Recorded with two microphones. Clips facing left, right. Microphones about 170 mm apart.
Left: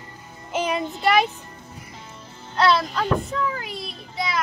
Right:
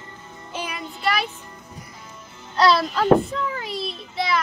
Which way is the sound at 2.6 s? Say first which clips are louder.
Right 2 dB; 35° right (ahead or behind).